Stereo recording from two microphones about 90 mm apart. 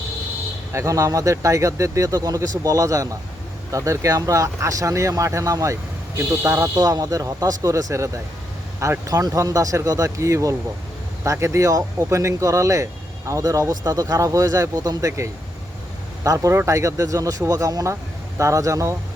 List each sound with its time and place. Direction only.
0.7 s speech: 35° right (ahead or behind)